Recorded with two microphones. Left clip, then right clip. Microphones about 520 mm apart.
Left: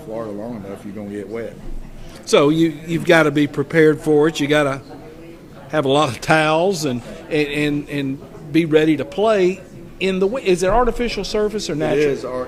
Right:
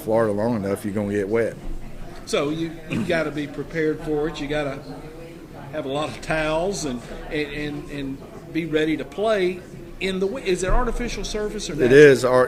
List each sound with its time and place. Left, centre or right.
0.1 s speech: right
2.2 s a man's voice: left
11.9 s speech: right